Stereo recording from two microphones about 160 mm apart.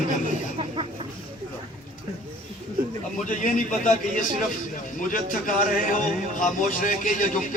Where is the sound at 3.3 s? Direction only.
50° left (ahead or behind).